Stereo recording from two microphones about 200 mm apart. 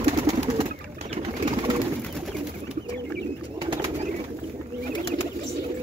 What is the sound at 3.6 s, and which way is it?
Bird, 25° right (ahead or behind).